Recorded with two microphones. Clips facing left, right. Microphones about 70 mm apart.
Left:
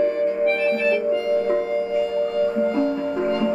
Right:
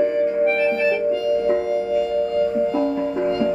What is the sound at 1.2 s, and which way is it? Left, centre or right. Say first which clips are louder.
Music: right 3 dB; left.